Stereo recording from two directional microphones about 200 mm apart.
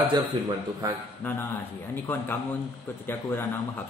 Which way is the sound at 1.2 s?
10° left (ahead or behind).